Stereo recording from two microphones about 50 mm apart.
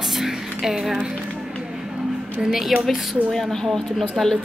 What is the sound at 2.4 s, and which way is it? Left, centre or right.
A woman's voice, centre.